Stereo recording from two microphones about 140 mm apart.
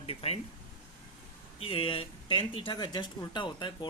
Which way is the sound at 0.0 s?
45° left (ahead or behind).